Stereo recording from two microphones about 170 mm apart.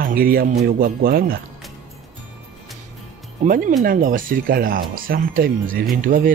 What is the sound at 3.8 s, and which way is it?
Speech, 55° right (ahead or behind).